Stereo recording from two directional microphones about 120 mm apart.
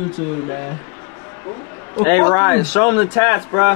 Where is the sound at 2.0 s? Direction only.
20° left (ahead or behind).